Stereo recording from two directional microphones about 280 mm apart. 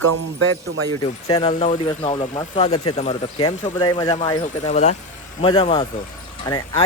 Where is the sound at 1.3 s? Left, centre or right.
Centre.